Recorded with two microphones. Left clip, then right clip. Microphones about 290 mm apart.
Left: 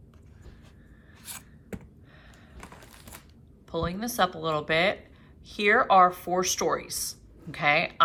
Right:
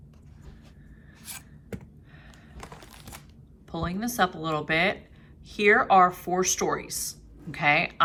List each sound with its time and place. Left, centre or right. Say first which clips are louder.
2.7 s coin: right 2 dB; right
3.7 s a woman's voice: left 1 dB; centre